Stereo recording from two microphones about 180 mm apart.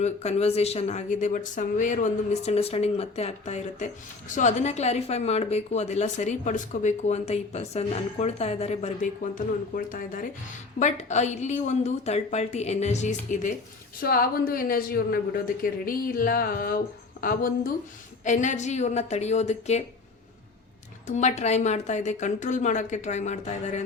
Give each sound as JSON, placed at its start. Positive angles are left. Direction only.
{"t": 0.0, "sound": "a woman's voice", "side_deg": 35}
{"t": 14.0, "sound": "a woman's voice", "side_deg": 55}
{"t": 21.1, "sound": "a woman's voice", "side_deg": 40}